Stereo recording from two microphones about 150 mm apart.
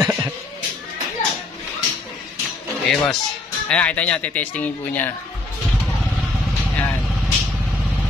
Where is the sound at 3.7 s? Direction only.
10° left (ahead or behind).